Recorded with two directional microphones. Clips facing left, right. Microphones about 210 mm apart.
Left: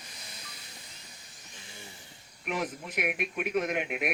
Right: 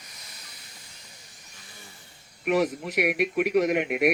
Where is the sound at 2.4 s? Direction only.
75° right (ahead or behind).